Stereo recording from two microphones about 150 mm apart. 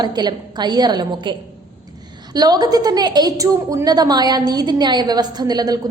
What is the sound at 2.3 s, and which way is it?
A woman's voice, 25° right (ahead or behind).